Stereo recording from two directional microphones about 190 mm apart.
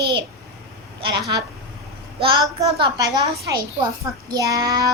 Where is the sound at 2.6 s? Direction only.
20° right (ahead or behind).